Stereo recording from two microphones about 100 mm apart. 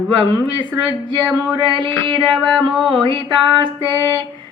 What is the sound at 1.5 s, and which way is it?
Music, 55° right (ahead or behind).